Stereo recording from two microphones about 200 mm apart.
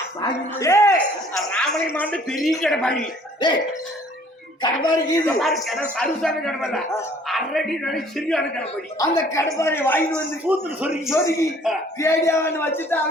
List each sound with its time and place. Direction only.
0.2 s speech: 15° left (ahead or behind)
4.6 s speech: 20° left (ahead or behind)
5.2 s speech: centre (ahead or behind)
9.0 s speech: 15° left (ahead or behind)
10.1 s a man's voice: 10° right (ahead or behind)
11.1 s speech: 15° left (ahead or behind)